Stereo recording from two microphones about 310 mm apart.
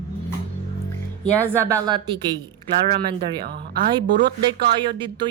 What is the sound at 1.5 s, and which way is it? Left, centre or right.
Speech, centre.